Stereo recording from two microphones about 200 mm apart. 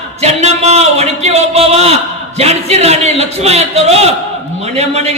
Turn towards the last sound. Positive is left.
turn(degrees=-30)  # may be behind; listen again after turning